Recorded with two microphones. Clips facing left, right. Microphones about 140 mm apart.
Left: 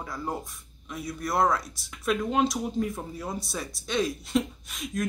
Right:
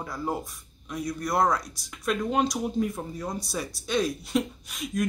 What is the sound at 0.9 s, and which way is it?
Speech, centre (ahead or behind).